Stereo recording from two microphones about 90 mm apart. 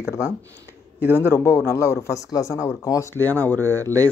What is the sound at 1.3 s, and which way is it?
Speech, 25° left (ahead or behind).